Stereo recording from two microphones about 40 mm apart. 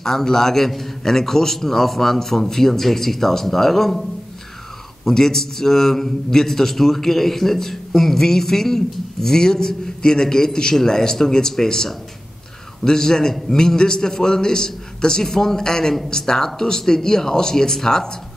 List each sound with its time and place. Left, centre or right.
0.0 s a man's voice: centre
5.0 s a man's voice: centre